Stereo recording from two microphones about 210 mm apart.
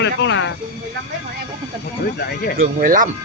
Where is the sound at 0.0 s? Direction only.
60° left (ahead or behind).